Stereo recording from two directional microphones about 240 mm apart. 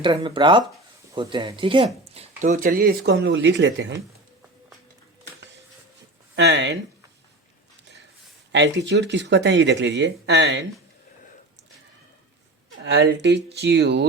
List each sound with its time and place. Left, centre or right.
0.0 s speech: centre; by 3.9 s right
6.3 s speech: right
8.5 s speech: right
12.8 s speech: right